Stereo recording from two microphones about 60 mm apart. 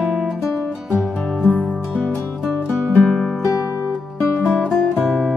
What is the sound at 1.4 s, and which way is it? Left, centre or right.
Music, left.